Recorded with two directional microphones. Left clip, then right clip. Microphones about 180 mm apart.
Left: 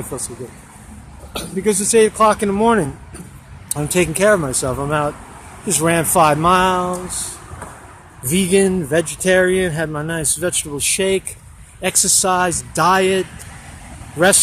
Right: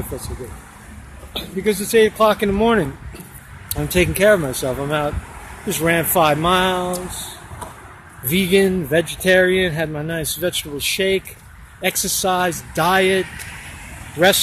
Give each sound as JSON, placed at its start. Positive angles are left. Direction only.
{"t": 1.3, "sound": "speech", "side_deg": 25}
{"t": 8.3, "sound": "speech", "side_deg": 10}